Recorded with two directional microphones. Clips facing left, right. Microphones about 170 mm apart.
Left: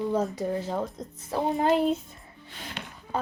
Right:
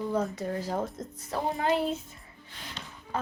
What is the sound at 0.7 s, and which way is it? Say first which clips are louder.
Speech: left 1 dB; centre (ahead or behind).